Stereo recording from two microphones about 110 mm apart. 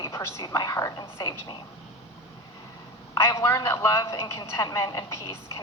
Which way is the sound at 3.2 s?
25° left (ahead or behind).